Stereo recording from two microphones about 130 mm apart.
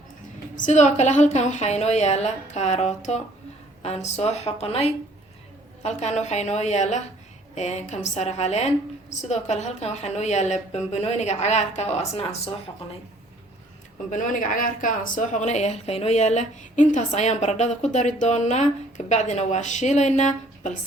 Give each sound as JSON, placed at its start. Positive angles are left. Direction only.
{"t": 0.5, "sound": "speech", "side_deg": 70}
{"t": 14.1, "sound": "speech", "side_deg": 85}